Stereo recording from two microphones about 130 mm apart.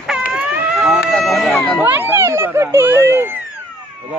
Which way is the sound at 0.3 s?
5° right (ahead or behind).